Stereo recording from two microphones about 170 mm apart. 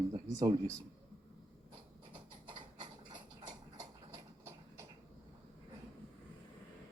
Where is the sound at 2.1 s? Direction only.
25° right (ahead or behind).